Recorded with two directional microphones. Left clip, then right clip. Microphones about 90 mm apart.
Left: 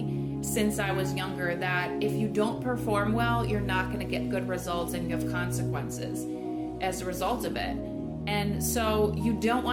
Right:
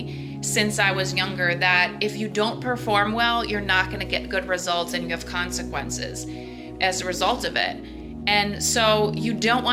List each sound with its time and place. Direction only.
0.5 s a woman's voice: 35° left (ahead or behind)
6.8 s a woman's voice: 40° left (ahead or behind)